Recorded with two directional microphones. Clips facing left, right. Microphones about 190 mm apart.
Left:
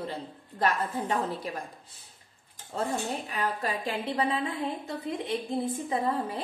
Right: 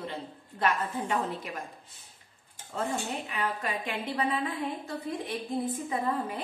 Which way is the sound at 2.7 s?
35° left (ahead or behind).